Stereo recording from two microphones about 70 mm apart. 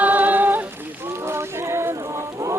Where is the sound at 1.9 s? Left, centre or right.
Right.